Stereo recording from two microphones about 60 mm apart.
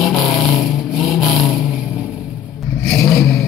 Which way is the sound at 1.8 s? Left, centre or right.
Centre.